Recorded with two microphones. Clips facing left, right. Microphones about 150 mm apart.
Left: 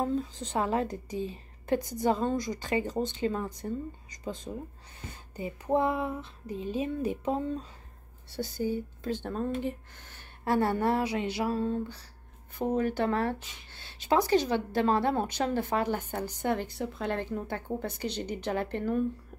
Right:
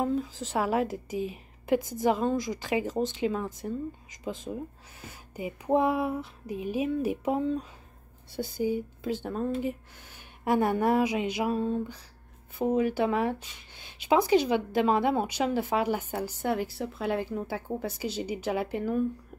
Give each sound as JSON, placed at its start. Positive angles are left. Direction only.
{"t": 0.0, "sound": "a sound", "side_deg": -10}
{"t": 0.4, "sound": "speech", "side_deg": -5}
{"t": 2.3, "sound": "speech", "side_deg": -90}
{"t": 2.6, "sound": "speech", "side_deg": -5}
{"t": 3.0, "sound": "speech", "side_deg": -90}
{"t": 3.3, "sound": "speech", "side_deg": -5}